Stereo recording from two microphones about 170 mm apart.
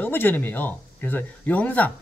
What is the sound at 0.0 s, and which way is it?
Speech, 10° left (ahead or behind).